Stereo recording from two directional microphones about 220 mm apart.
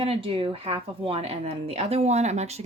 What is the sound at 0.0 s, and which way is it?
Speech, 25° right (ahead or behind).